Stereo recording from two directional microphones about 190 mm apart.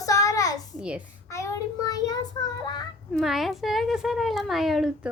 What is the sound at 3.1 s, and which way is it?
A woman's voice, centre (ahead or behind).